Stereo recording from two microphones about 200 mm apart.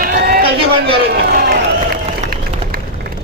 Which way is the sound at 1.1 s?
50° right (ahead or behind).